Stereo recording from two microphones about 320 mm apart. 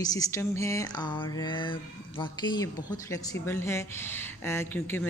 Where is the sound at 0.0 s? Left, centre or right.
Centre.